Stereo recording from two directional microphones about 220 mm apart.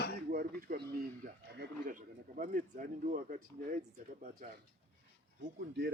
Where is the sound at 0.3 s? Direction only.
40° right (ahead or behind).